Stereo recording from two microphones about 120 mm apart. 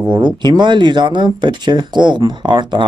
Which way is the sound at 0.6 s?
40° right (ahead or behind).